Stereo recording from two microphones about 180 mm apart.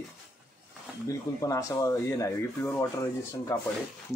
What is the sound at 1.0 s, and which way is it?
Speech, 20° left (ahead or behind).